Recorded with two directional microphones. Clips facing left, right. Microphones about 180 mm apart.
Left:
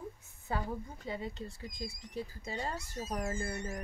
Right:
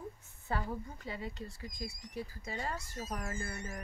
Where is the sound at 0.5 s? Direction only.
20° left (ahead or behind).